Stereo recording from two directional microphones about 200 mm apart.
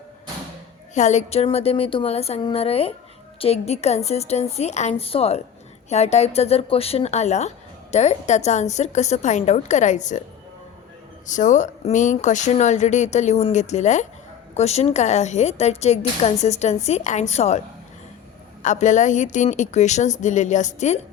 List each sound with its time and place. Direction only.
0.9 s speech: 35° left (ahead or behind)
11.3 s speech: 40° left (ahead or behind)
18.6 s speech: 35° left (ahead or behind)